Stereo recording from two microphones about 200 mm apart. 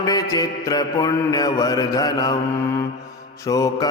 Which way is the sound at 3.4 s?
15° left (ahead or behind).